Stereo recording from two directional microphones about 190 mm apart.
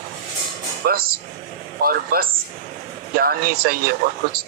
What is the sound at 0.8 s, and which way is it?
Speech, 50° right (ahead or behind).